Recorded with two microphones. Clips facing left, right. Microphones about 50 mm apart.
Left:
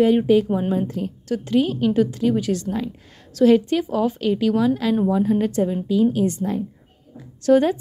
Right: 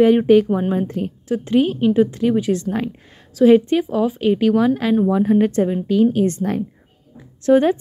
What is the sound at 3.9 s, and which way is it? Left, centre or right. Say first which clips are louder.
Speech: right 2 dB; centre.